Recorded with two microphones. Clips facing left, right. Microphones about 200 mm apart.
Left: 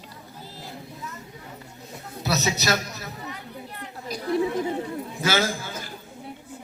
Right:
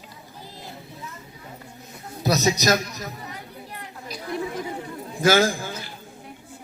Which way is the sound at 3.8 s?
35° left (ahead or behind).